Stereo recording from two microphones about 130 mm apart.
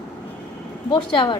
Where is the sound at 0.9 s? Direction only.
35° left (ahead or behind).